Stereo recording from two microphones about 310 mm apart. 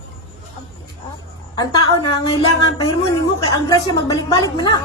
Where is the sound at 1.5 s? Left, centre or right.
Centre.